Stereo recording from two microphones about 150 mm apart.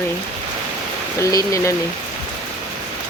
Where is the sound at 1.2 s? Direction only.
20° left (ahead or behind).